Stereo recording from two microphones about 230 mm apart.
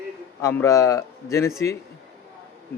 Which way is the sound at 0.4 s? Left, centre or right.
Centre.